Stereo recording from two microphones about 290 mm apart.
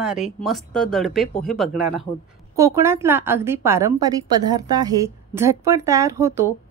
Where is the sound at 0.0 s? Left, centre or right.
Centre.